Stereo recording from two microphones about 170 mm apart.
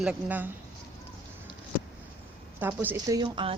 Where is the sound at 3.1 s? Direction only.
30° right (ahead or behind).